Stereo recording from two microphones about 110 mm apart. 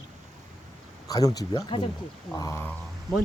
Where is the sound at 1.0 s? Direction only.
35° left (ahead or behind).